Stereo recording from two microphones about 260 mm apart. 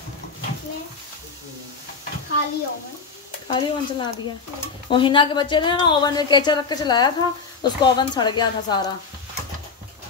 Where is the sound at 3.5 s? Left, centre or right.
Centre.